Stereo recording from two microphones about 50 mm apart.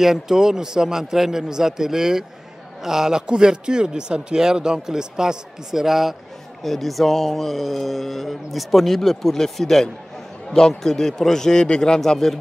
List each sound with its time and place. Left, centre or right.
0.0 s a man's voice: centre